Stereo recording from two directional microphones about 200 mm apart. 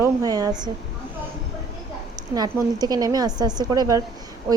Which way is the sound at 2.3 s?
20° right (ahead or behind).